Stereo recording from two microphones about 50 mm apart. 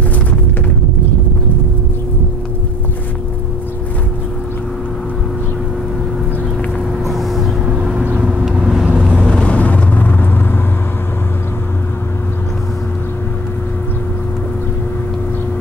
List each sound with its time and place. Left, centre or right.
7.1 s vehicle: centre
7.6 s vehicle: centre
9.3 s vehicle: left